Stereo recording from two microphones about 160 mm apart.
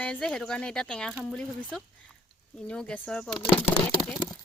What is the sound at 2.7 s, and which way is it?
Speech, 5° left (ahead or behind).